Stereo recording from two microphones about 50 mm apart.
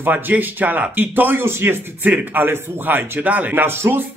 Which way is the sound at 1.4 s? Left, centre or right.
Right.